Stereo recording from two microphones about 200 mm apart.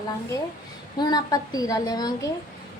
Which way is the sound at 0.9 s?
20° left (ahead or behind).